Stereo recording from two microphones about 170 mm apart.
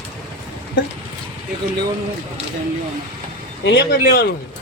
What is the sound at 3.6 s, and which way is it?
Speech, 85° left.